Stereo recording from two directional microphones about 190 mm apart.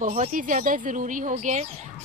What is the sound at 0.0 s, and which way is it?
Speech, 40° right (ahead or behind).